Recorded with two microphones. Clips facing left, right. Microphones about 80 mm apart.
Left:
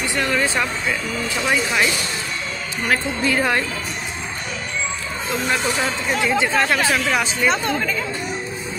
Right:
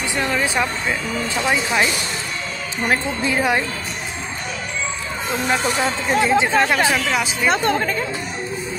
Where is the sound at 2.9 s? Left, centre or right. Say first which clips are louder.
Left 1 dB; right.